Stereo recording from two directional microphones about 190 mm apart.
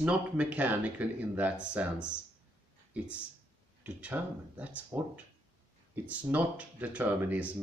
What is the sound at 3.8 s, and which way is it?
Speech, 5° right (ahead or behind).